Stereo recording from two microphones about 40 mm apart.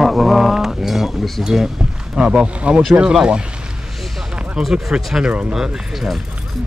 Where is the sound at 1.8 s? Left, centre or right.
Right.